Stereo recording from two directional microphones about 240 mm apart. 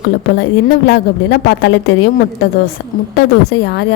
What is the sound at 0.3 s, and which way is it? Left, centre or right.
A woman's voice, left.